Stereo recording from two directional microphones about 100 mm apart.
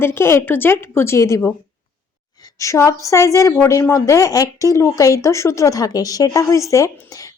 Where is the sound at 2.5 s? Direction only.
30° left (ahead or behind).